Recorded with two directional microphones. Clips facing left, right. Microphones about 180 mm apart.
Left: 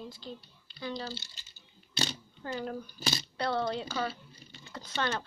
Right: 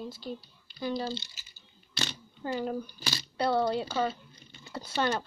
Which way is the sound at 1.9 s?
35° left (ahead or behind).